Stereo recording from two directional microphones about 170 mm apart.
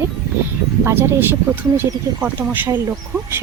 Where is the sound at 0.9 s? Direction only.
15° right (ahead or behind).